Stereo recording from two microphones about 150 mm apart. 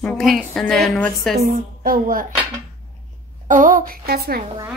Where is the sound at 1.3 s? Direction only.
65° right (ahead or behind).